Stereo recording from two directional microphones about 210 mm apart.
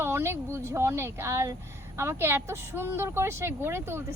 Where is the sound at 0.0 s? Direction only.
10° right (ahead or behind).